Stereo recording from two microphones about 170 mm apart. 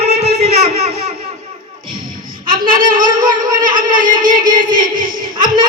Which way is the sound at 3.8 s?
50° right (ahead or behind).